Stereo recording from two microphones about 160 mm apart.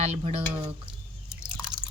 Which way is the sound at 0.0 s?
40° right (ahead or behind).